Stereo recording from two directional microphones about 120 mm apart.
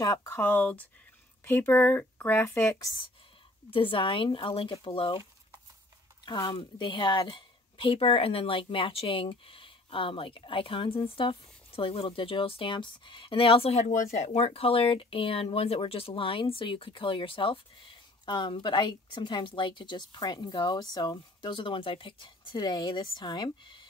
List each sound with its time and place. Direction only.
0.0 s speech: 30° left (ahead or behind)
0.4 s speech: 15° left (ahead or behind)
3.7 s speech: 45° left (ahead or behind)
6.2 s speech: 40° left (ahead or behind)